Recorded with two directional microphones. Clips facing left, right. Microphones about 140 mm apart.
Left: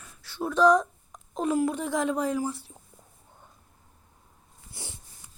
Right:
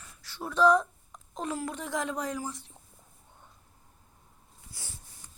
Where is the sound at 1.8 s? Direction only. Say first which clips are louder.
Left 6 dB; 25° left (ahead or behind).